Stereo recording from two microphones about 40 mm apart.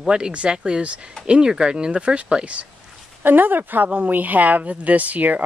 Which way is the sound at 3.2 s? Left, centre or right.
Right.